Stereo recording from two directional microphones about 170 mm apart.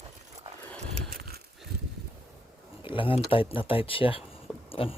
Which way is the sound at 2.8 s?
30° left (ahead or behind).